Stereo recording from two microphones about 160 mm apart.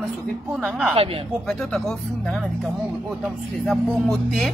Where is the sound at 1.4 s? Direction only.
Centre (ahead or behind).